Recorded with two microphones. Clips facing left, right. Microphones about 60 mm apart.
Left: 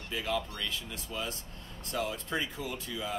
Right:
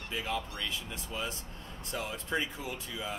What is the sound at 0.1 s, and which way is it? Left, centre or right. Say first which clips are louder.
Speech: left 2 dB; centre.